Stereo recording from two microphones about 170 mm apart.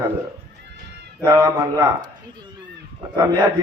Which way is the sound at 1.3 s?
20° right (ahead or behind).